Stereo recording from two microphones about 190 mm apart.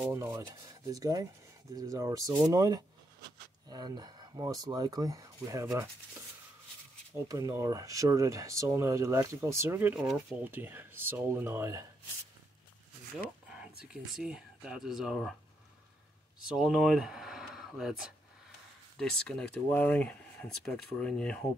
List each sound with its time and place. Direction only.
0.1 s speech: 15° right (ahead or behind)
7.1 s speech: 15° right (ahead or behind)
13.8 s speech: 5° right (ahead or behind)
16.5 s speech: centre (ahead or behind)